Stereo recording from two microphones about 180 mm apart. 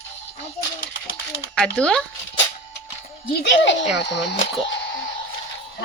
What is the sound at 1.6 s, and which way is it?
Speech, 5° left (ahead or behind).